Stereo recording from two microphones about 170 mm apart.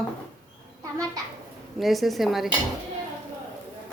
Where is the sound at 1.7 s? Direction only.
Centre (ahead or behind).